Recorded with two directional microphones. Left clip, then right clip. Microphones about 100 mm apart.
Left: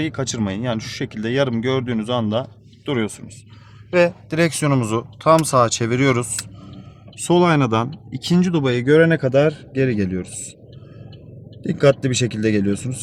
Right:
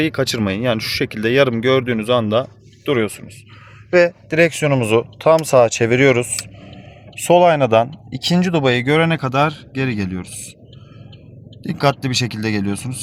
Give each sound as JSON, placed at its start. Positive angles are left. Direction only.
{"t": 0.0, "sound": "speech", "side_deg": -40}
{"t": 4.8, "sound": "speech", "side_deg": -25}
{"t": 7.3, "sound": "speech", "side_deg": -30}
{"t": 9.2, "sound": "speech", "side_deg": -25}
{"t": 11.6, "sound": "speech", "side_deg": -25}